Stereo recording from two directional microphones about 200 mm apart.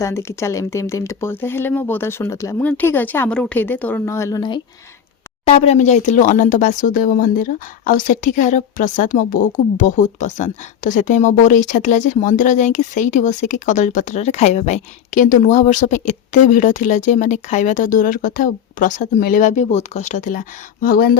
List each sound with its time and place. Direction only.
0.0 s speech: 15° left (ahead or behind)
5.5 s speech: 30° left (ahead or behind)
20.8 s speech: 50° left (ahead or behind)